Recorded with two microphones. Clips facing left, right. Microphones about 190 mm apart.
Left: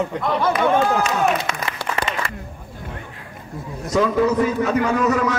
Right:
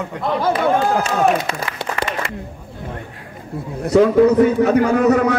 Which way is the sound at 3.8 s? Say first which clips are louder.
Right 6 dB; 60° right (ahead or behind).